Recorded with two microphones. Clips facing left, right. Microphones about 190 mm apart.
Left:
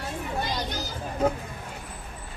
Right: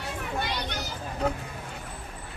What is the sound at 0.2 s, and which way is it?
Children playing, 65° right (ahead or behind).